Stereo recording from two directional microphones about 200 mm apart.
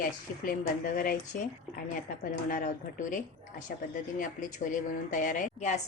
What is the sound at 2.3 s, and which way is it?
A woman's voice, 40° left (ahead or behind).